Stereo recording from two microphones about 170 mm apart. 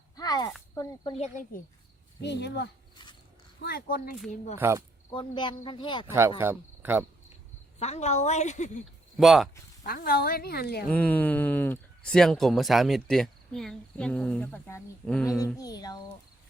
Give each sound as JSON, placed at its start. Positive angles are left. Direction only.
{"t": 0.2, "sound": "a sound", "side_deg": 20}
{"t": 0.7, "sound": "speech", "side_deg": 20}
{"t": 1.1, "sound": "speech", "side_deg": 45}
{"t": 2.2, "sound": "speech", "side_deg": 85}
{"t": 3.6, "sound": "a woman's voice", "side_deg": 65}
{"t": 4.5, "sound": "speech", "side_deg": -15}
{"t": 5.1, "sound": "speech", "side_deg": 30}
{"t": 6.1, "sound": "speech", "side_deg": -15}
{"t": 7.8, "sound": "a woman's voice", "side_deg": 40}
{"t": 9.1, "sound": "speech", "side_deg": 0}
{"t": 9.8, "sound": "a woman's voice", "side_deg": 60}
{"t": 10.9, "sound": "speech", "side_deg": 10}
{"t": 15.5, "sound": "speech", "side_deg": 20}